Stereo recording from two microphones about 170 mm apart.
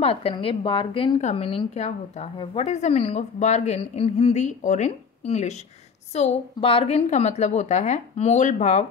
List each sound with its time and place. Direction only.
0.0 s a woman's voice: 35° left (ahead or behind)